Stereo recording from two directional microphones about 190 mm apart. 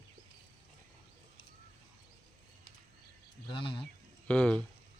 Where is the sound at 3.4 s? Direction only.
25° left (ahead or behind).